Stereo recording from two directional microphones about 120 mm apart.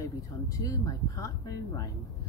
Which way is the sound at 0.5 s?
30° left (ahead or behind).